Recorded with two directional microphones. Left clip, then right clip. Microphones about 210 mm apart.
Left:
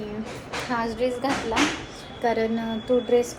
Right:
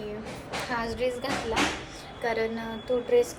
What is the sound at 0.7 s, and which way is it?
A woman's voice, centre (ahead or behind).